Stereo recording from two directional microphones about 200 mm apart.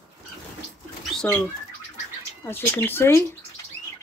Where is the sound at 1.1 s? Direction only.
5° left (ahead or behind).